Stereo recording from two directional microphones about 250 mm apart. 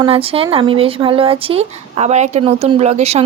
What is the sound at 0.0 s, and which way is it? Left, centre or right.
Speech, right.